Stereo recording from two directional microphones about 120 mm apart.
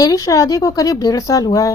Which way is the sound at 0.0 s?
30° left (ahead or behind).